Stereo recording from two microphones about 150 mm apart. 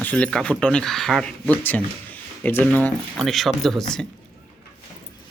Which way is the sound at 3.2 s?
Centre (ahead or behind).